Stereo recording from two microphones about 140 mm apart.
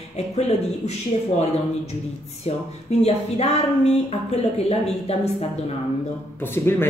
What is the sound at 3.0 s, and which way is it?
Speech, 50° left (ahead or behind).